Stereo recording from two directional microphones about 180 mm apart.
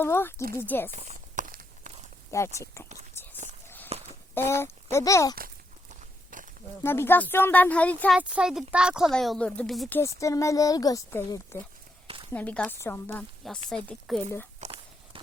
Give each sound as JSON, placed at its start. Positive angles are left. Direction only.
{"t": 0.0, "sound": "speech", "side_deg": 15}
{"t": 0.9, "sound": "walk", "side_deg": -40}
{"t": 2.3, "sound": "speech", "side_deg": 15}
{"t": 3.2, "sound": "whispering", "side_deg": 15}
{"t": 3.9, "sound": "a sound", "side_deg": -35}
{"t": 4.4, "sound": "speech", "side_deg": 15}
{"t": 5.9, "sound": "walk", "side_deg": -45}
{"t": 6.8, "sound": "speech", "side_deg": 10}
{"t": 8.2, "sound": "speech", "side_deg": -5}
{"t": 10.0, "sound": "speech", "side_deg": 15}
{"t": 12.0, "sound": "a sound", "side_deg": -30}
{"t": 12.3, "sound": "speech", "side_deg": 10}
{"t": 14.6, "sound": "walk", "side_deg": -35}